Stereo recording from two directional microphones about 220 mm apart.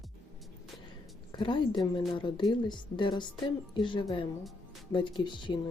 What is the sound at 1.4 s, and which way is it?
Speech, 20° left (ahead or behind).